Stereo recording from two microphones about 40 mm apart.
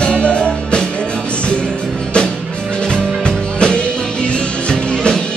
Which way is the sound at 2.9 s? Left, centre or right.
Centre.